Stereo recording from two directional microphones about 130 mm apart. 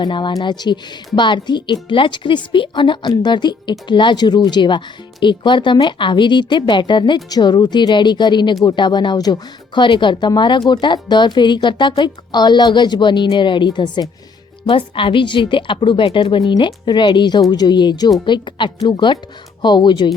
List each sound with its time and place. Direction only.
0.0 s a woman's voice: 35° left (ahead or behind)